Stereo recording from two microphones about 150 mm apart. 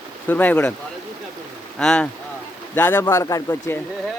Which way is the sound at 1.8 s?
5° left (ahead or behind).